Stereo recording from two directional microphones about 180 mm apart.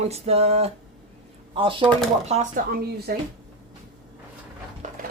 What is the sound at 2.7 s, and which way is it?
Speech, 60° right (ahead or behind).